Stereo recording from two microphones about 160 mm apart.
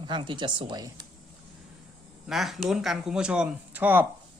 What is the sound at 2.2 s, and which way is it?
Speech, centre (ahead or behind).